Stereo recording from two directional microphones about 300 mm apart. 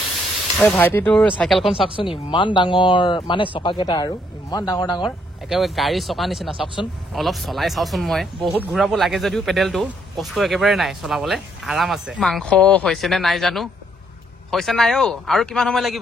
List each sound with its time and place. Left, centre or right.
0.6 s speech: centre
2.0 s speech: centre
5.5 s speech: centre